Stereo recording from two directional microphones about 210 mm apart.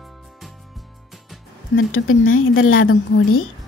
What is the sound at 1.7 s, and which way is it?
A woman's voice, 70° left (ahead or behind).